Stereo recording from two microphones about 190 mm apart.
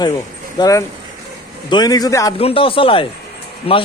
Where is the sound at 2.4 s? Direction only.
30° left (ahead or behind).